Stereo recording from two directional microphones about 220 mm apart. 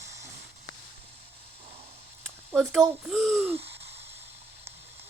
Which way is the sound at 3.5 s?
25° right (ahead or behind).